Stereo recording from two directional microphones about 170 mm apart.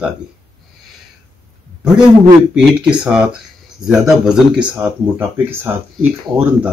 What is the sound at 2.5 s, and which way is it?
A man's voice, 5° right (ahead or behind).